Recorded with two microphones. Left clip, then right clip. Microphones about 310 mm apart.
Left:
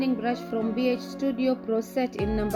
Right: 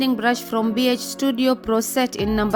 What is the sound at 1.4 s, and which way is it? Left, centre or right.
A woman's voice, right.